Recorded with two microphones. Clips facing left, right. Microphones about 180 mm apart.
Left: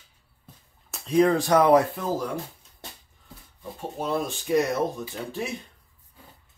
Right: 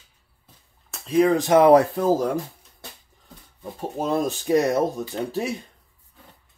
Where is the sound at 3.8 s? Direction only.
40° right (ahead or behind).